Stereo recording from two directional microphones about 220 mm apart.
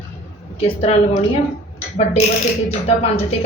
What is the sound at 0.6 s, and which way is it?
Speech, 30° left (ahead or behind).